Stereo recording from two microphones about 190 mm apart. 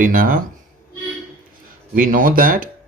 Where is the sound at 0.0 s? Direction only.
45° right (ahead or behind).